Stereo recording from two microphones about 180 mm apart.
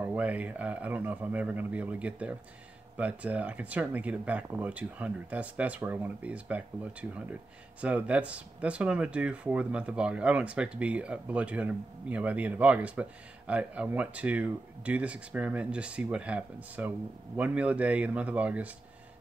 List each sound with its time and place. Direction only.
0.0 s speech: 10° right (ahead or behind)